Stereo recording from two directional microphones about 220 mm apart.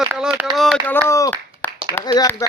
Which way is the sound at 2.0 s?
15° left (ahead or behind).